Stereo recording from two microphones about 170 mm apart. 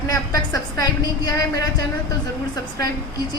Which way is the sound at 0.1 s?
20° left (ahead or behind).